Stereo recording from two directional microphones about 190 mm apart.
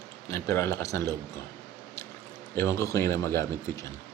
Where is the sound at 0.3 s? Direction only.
15° left (ahead or behind).